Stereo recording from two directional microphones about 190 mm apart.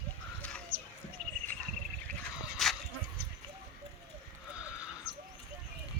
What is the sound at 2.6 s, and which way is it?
Dog, centre (ahead or behind).